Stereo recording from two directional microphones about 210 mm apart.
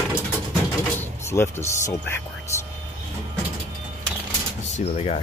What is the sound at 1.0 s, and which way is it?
Speech, 10° left (ahead or behind).